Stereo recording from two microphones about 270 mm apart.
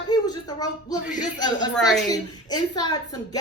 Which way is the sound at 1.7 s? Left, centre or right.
Centre.